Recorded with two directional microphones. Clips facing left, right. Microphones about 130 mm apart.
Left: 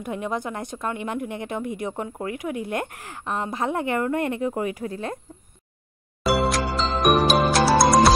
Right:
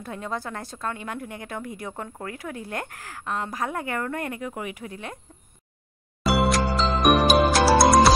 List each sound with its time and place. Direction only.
0.0 s a woman's voice: 20° left (ahead or behind); by 5.2 s 35° left (ahead or behind)
6.2 s music: centre (ahead or behind)